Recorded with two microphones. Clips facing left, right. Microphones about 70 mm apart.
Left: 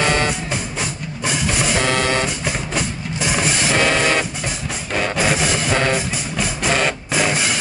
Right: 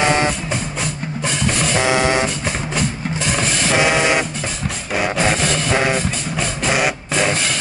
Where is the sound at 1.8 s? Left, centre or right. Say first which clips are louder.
Right 4 dB; centre.